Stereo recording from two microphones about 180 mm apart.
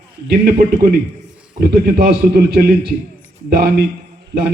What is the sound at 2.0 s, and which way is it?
Speech, 65° right (ahead or behind).